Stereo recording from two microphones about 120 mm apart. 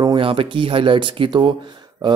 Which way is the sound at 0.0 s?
45° right (ahead or behind).